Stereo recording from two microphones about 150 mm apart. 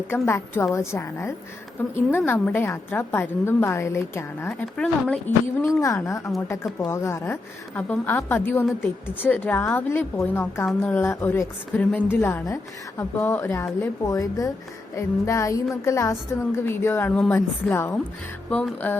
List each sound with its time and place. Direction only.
0.1 s a woman's voice: 15° left (ahead or behind)
5.6 s a woman's voice: 20° left (ahead or behind)